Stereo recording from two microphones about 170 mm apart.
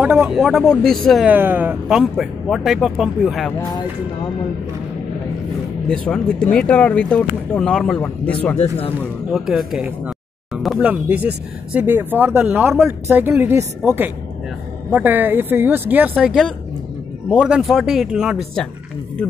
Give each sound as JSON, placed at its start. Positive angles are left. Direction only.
{"t": 0.0, "sound": "speech", "side_deg": -5}
{"t": 1.3, "sound": "speech", "side_deg": -10}
{"t": 5.9, "sound": "speech", "side_deg": 5}
{"t": 8.5, "sound": "speech", "side_deg": 35}
{"t": 9.3, "sound": "speech", "side_deg": 0}